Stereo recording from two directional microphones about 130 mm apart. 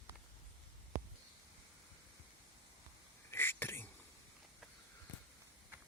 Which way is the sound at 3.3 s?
15° left (ahead or behind).